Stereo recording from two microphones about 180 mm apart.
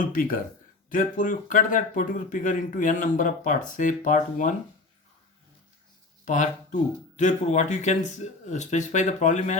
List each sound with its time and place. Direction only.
0.1 s speech: 50° left (ahead or behind)
6.2 s speech: 40° left (ahead or behind)